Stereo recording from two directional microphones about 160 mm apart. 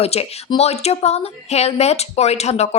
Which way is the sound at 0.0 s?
40° left (ahead or behind).